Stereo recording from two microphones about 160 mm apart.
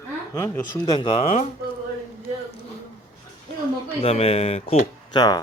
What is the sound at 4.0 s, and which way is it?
Speech, 40° left (ahead or behind).